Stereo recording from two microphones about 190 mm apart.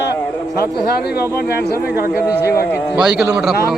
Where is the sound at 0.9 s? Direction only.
55° left (ahead or behind).